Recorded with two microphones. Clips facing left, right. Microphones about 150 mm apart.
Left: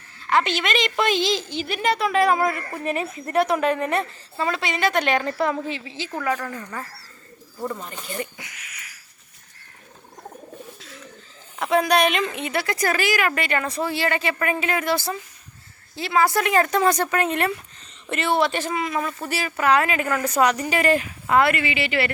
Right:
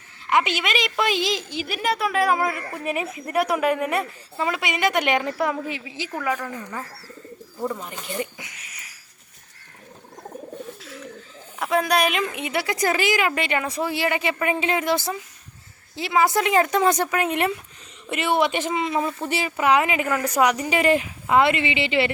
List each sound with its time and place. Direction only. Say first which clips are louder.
0.3 s a woman's voice: even; 10° right (ahead or behind)
11.6 s speech: left 2 dB; centre (ahead or behind); by 22.1 s 20° right (ahead or behind)